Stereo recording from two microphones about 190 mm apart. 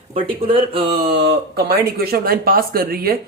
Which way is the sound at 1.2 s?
55° right (ahead or behind).